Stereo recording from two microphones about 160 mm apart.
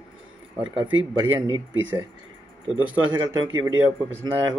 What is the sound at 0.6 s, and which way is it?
Speech, 30° right (ahead or behind).